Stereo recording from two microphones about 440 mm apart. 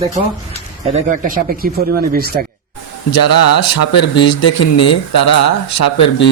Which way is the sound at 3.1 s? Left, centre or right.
Left.